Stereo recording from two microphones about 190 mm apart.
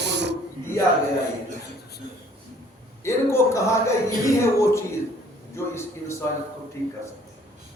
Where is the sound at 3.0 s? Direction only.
15° left (ahead or behind).